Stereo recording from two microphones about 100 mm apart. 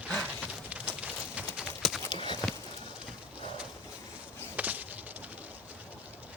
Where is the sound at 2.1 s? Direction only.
50° left (ahead or behind).